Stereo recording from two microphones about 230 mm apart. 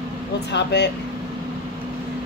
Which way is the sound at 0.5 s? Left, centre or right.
Left.